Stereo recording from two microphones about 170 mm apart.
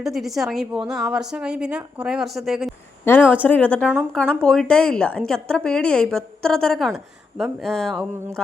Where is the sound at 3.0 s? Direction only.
15° left (ahead or behind).